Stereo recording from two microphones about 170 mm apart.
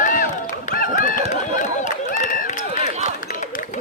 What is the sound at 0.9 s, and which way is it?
Run, 50° left (ahead or behind).